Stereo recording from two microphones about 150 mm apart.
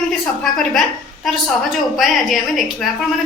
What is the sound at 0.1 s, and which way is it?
A woman's voice, 5° left (ahead or behind).